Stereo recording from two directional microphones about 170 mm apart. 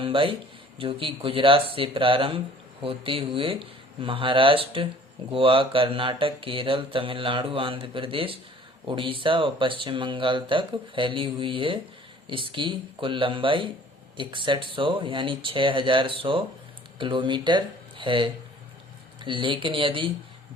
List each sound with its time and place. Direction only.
0.0 s speech: 30° right (ahead or behind)